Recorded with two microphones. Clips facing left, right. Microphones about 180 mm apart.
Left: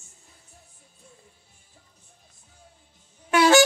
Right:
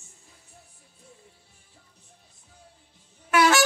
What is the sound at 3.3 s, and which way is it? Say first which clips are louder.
Music: left 2 dB; 20° left (ahead or behind).